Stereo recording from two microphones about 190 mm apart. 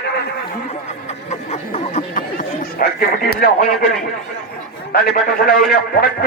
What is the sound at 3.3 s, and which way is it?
Speech, 50° left (ahead or behind).